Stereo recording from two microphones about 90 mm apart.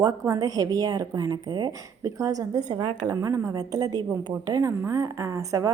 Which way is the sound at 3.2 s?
35° right (ahead or behind).